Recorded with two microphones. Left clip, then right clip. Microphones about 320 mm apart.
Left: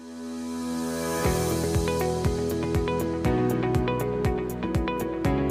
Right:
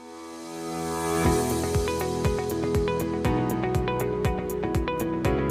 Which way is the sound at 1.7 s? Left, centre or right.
Centre.